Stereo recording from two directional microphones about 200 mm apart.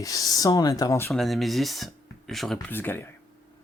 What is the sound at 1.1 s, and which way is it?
Speech, centre (ahead or behind).